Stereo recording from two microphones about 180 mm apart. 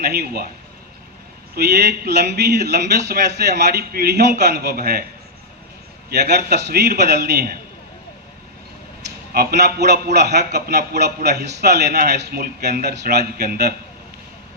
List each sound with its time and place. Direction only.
0.0 s a man's voice: 60° right (ahead or behind)
1.5 s a man's voice: 65° right (ahead or behind)
6.1 s a man's voice: 60° right (ahead or behind)
9.0 s a man's voice: 60° right (ahead or behind)